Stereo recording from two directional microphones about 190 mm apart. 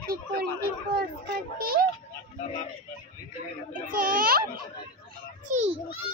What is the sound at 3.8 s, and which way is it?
Speech, 50° right (ahead or behind).